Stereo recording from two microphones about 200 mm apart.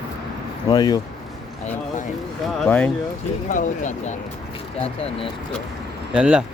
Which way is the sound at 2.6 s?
5° left (ahead or behind).